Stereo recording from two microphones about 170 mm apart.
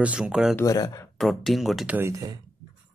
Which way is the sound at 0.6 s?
20° left (ahead or behind).